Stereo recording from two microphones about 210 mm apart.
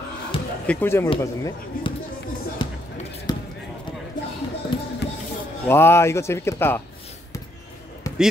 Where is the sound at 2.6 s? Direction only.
20° left (ahead or behind).